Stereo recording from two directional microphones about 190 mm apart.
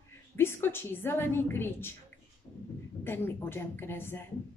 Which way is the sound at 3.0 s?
10° left (ahead or behind).